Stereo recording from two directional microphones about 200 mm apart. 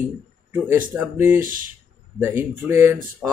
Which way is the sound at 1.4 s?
45° right (ahead or behind).